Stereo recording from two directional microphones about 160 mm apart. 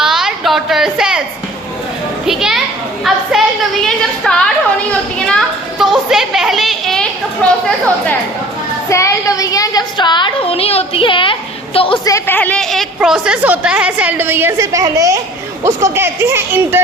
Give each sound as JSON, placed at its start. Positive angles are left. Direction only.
{"t": 0.0, "sound": "a sound", "side_deg": -5}
{"t": 2.2, "sound": "children playing", "side_deg": 0}
{"t": 3.0, "sound": "a sound", "side_deg": 0}
{"t": 7.4, "sound": "speech", "side_deg": 5}
{"t": 8.9, "sound": "a woman's voice", "side_deg": 20}
{"t": 12.0, "sound": "a woman's voice", "side_deg": 15}